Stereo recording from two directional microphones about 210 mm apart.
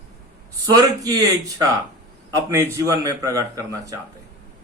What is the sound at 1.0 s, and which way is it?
Speech, 15° right (ahead or behind).